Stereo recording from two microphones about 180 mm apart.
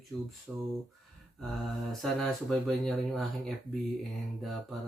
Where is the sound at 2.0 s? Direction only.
Centre (ahead or behind).